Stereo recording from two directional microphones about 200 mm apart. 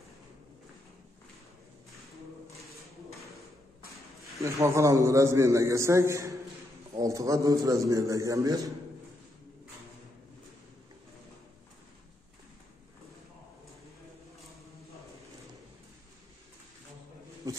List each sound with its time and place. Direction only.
4.4 s a man's voice: 15° right (ahead or behind)
17.4 s bee: 15° right (ahead or behind)